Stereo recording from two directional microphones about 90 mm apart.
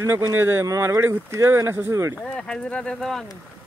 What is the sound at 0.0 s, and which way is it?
Speech, 30° right (ahead or behind).